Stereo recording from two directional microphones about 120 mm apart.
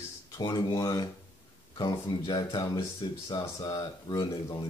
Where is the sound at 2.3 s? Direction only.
40° left (ahead or behind).